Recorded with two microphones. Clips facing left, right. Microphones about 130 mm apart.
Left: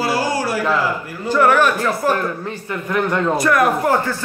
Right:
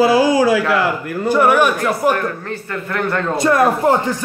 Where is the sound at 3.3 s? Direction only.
25° right (ahead or behind).